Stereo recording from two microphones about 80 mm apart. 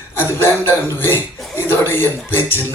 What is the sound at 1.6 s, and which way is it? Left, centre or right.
Music, left.